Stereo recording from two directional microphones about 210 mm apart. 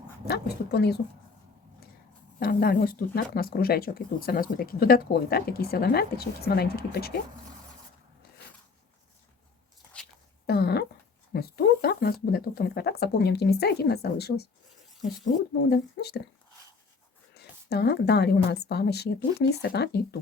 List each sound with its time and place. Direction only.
0.3 s speech: 50° left (ahead or behind)
2.4 s speech: 45° left (ahead or behind)
10.4 s a sound: 50° left (ahead or behind)
11.3 s speech: 45° left (ahead or behind)
15.7 s speech: 50° left (ahead or behind)
17.3 s speech: 50° left (ahead or behind)